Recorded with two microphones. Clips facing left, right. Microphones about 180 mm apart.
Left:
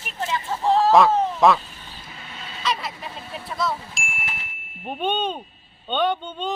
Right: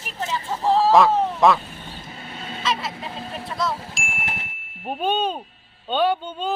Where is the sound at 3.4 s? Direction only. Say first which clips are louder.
Even; centre (ahead or behind).